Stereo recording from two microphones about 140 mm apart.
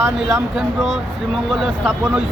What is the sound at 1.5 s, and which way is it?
Speech, centre (ahead or behind).